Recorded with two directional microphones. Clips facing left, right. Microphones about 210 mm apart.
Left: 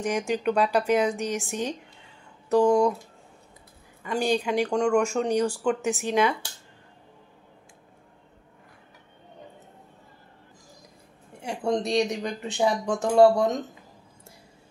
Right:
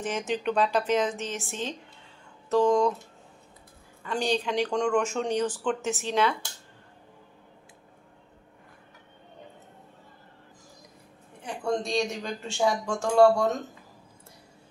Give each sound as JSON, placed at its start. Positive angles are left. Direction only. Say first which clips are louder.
{"t": 0.3, "sound": "speech", "louder": "left 1 dB", "side_deg": 10}
{"t": 4.0, "sound": "speech", "louder": "left 3 dB", "side_deg": 10}
{"t": 11.4, "sound": "a sound", "louder": "left 3 dB", "side_deg": 25}
{"t": 12.1, "sound": "speech", "louder": "left 4 dB", "side_deg": 15}